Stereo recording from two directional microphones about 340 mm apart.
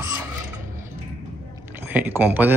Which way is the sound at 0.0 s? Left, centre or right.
Centre.